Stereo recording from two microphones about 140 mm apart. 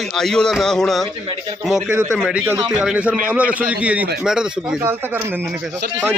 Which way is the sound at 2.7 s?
5° right (ahead or behind).